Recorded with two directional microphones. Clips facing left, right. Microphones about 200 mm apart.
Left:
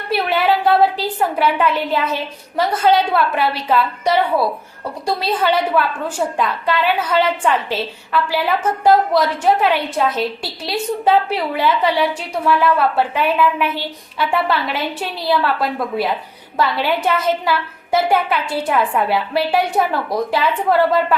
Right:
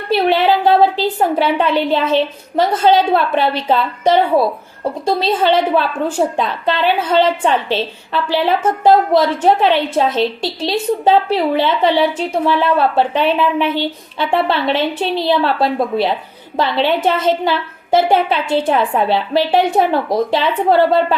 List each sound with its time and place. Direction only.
0.1 s a woman's voice: 25° right (ahead or behind)
16.6 s a woman's voice: 25° right (ahead or behind)